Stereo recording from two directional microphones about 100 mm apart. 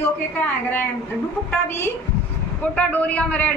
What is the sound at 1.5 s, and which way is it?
A woman's voice, 25° left (ahead or behind).